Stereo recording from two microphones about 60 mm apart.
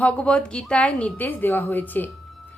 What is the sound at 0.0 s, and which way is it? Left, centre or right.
A woman's voice, left.